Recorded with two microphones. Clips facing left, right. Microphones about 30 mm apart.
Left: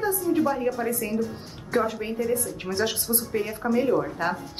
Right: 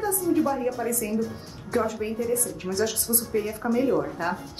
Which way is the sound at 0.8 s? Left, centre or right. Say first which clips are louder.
Even; left.